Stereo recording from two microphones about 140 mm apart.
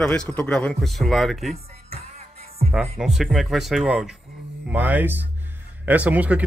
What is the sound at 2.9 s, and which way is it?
A man's voice, 5° right (ahead or behind).